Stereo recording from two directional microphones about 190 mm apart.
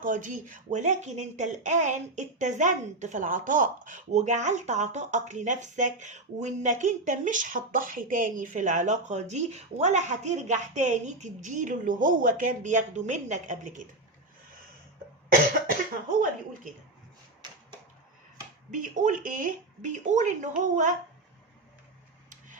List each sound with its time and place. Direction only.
0.0 s speech: 45° right (ahead or behind)
18.7 s speech: 40° right (ahead or behind)